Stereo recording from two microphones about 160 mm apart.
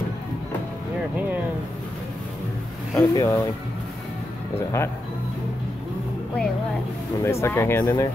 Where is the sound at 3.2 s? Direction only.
20° left (ahead or behind).